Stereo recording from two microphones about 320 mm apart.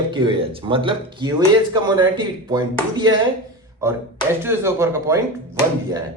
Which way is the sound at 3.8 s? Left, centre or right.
Centre.